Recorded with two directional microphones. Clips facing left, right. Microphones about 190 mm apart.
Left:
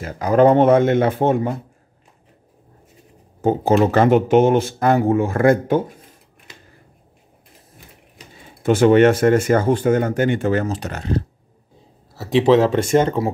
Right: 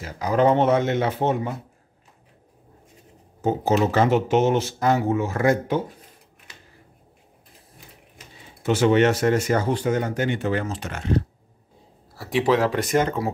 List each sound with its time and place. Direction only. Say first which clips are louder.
0.0 s speech: left 6 dB; 50° left (ahead or behind)
3.3 s speech: left 5 dB; 55° left (ahead or behind)
8.6 s speech: left 6 dB; 50° left (ahead or behind)
12.2 s speech: left 6 dB; 25° left (ahead or behind)